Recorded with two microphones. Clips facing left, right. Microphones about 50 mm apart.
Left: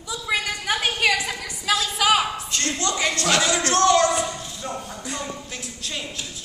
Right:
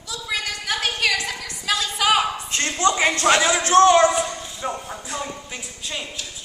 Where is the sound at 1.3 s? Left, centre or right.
Centre.